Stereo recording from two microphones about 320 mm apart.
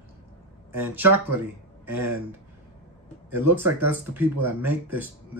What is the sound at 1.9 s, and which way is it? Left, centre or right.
Speech, centre.